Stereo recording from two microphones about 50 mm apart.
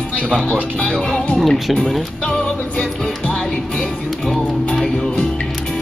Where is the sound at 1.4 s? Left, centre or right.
Centre.